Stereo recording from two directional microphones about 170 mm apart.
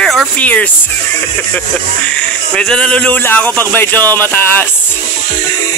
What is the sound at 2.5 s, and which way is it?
Speech, 5° left (ahead or behind).